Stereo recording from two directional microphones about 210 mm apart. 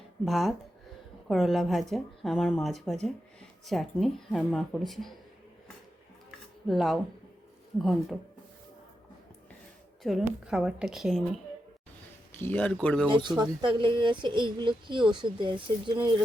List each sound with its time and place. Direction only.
0.3 s speech: centre (ahead or behind)
6.7 s speech: centre (ahead or behind)
10.0 s speech: centre (ahead or behind)
12.4 s speech: 5° left (ahead or behind)
13.1 s speech: 20° right (ahead or behind)